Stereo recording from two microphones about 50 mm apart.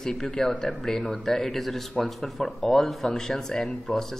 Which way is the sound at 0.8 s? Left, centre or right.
Centre.